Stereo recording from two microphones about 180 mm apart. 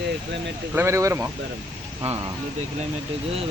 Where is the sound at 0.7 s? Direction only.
15° right (ahead or behind).